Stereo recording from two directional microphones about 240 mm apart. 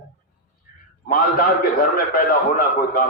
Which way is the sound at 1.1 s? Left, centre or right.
Left.